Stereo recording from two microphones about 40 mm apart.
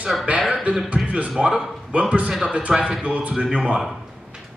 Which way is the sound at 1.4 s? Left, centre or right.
Centre.